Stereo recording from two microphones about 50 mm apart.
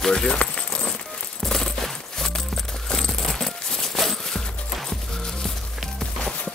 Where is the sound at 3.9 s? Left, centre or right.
Centre.